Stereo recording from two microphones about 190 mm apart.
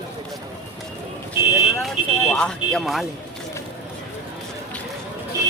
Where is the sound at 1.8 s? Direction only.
5° left (ahead or behind).